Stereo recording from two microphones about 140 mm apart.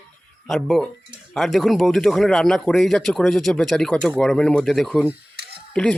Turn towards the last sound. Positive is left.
turn(degrees=5)  # may be behind; listen again after turning